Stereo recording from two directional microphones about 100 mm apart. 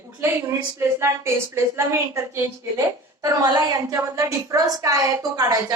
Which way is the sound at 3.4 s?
40° right (ahead or behind).